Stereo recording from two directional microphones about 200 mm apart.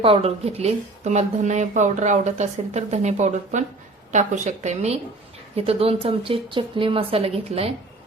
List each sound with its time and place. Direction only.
0.0 s a woman's voice: 30° right (ahead or behind)